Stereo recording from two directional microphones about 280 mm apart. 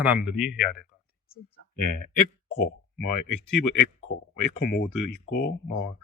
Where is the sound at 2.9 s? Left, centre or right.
Left.